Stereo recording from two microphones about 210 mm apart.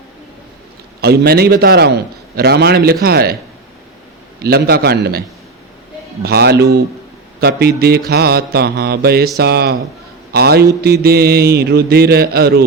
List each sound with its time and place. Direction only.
1.0 s mantra: 50° right (ahead or behind)
4.4 s mantra: 50° right (ahead or behind)
6.2 s mantra: 50° right (ahead or behind)